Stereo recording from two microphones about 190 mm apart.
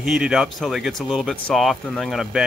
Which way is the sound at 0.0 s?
Centre (ahead or behind).